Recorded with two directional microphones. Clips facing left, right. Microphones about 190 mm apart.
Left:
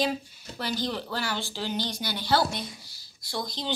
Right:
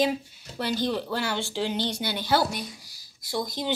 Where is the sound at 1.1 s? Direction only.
20° right (ahead or behind).